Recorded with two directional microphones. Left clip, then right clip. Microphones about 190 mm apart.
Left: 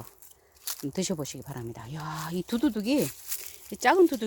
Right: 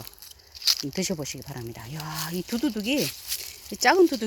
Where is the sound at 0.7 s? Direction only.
10° left (ahead or behind).